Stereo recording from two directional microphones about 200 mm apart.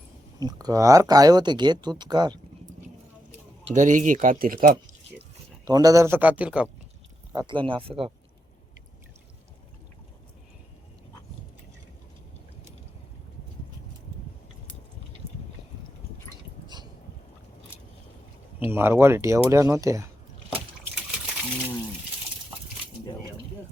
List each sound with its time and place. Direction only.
0.3 s speech: 20° right (ahead or behind)
3.7 s speech: 40° right (ahead or behind)
5.6 s speech: 20° right (ahead or behind)
7.3 s speech: 25° right (ahead or behind)
16.6 s a sound: 20° right (ahead or behind)
18.6 s speech: 10° right (ahead or behind)